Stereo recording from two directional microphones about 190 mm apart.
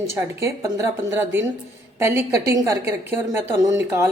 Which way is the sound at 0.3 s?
15° right (ahead or behind).